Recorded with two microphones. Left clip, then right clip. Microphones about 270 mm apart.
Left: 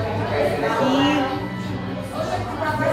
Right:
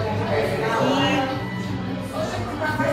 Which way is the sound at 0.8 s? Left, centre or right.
Centre.